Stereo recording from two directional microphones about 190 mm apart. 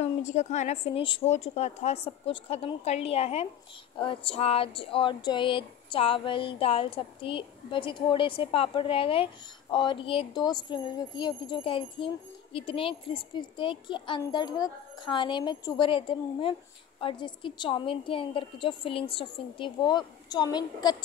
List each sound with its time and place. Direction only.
0.0 s a woman's voice: 35° left (ahead or behind); by 20.9 s 20° left (ahead or behind)